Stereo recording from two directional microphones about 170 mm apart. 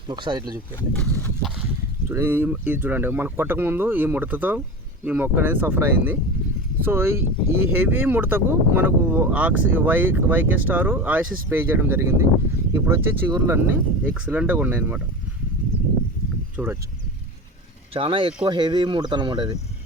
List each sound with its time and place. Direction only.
0.1 s speech: 25° right (ahead or behind)
0.9 s a sound: 5° left (ahead or behind)
2.0 s speech: 15° right (ahead or behind)
16.6 s speech: 10° right (ahead or behind)
17.9 s speech: 30° right (ahead or behind)